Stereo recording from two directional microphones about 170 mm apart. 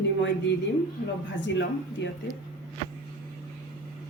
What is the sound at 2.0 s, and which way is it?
Speech, 90° left.